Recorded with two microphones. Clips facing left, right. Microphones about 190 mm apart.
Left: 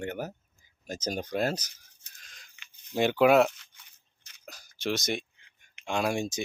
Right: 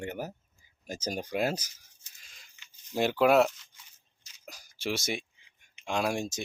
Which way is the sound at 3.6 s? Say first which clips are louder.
Right 1 dB; 60° left (ahead or behind).